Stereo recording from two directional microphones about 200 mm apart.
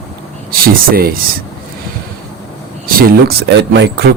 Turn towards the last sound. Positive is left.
turn(degrees=-60)  # may be behind; listen again after turning